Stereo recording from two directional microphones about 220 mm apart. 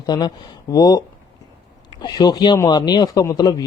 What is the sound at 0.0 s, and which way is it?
Speech, 20° left (ahead or behind).